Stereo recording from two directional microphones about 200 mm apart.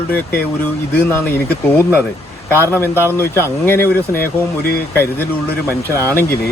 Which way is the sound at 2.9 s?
10° right (ahead or behind).